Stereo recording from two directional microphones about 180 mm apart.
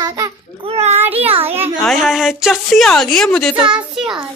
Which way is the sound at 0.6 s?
35° right (ahead or behind).